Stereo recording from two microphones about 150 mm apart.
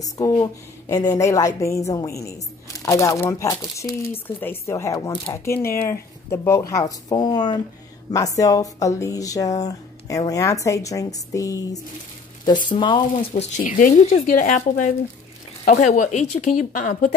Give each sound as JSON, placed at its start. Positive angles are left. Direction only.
{"t": 0.0, "sound": "speech", "side_deg": 20}
{"t": 5.4, "sound": "speech", "side_deg": 15}
{"t": 13.6, "sound": "speech", "side_deg": 60}
{"t": 14.0, "sound": "speech", "side_deg": 50}